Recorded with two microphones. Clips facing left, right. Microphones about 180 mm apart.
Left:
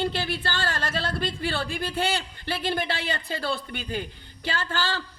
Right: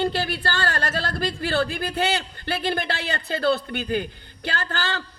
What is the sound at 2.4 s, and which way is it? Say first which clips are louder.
Speech: right 2 dB; 65° right (ahead or behind).